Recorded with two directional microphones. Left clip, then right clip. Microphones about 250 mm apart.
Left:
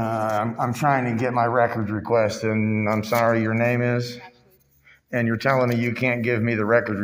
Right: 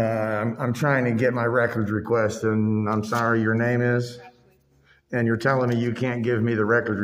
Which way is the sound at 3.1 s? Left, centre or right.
Centre.